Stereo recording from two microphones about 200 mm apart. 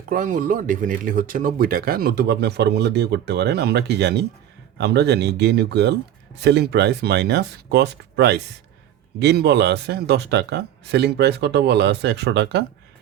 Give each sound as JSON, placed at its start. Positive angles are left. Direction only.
{"t": 0.1, "sound": "speech", "side_deg": -40}